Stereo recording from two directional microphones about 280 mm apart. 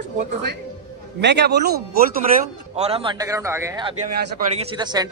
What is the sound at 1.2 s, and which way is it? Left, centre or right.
Speech, right.